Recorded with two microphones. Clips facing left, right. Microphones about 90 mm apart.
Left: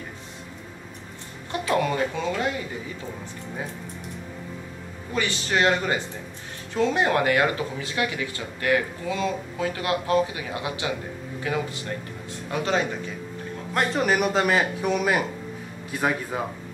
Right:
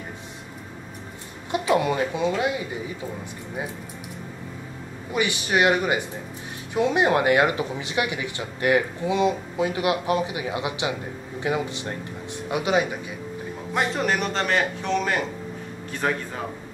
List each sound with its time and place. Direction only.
1.5 s speech: 15° right (ahead or behind)
5.1 s a man's voice: 15° right (ahead or behind)
13.7 s a man's voice: centre (ahead or behind)